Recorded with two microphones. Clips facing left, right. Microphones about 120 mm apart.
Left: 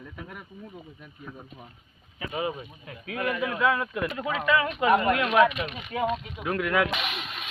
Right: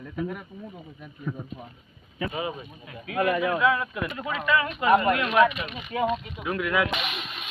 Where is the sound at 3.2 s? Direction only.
50° right (ahead or behind).